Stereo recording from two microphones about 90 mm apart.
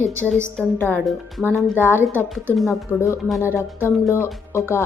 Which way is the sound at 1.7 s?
25° left (ahead or behind).